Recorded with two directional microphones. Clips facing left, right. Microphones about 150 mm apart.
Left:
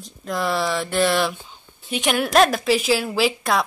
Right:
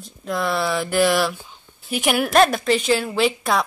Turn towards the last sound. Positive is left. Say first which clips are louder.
# right 1 dB
turn(degrees=0)  # may be behind; listen again after turning